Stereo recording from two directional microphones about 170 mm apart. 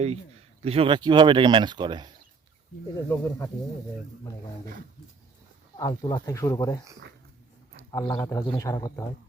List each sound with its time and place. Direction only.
0.6 s speech: 35° right (ahead or behind)
3.1 s speech: 15° left (ahead or behind)
5.8 s a man's voice: 25° left (ahead or behind)
7.9 s a man's voice: 20° left (ahead or behind)